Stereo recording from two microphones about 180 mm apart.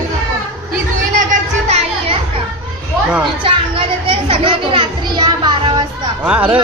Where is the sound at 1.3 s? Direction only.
35° right (ahead or behind).